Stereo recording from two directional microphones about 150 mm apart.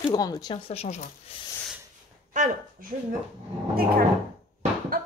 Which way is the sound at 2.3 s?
60° right (ahead or behind).